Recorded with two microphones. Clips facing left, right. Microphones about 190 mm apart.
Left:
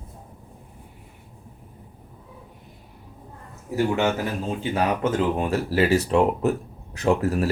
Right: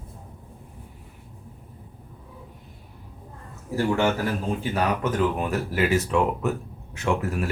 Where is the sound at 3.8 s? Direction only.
20° left (ahead or behind); by 7.4 s 35° left (ahead or behind).